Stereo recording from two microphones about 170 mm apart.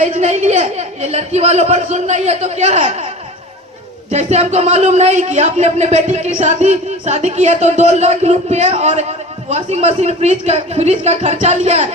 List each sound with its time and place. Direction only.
0.0 s speech: 40° right (ahead or behind)
4.1 s speech: 40° right (ahead or behind)